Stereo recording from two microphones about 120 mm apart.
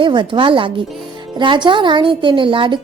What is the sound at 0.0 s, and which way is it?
A woman's voice, 40° right (ahead or behind).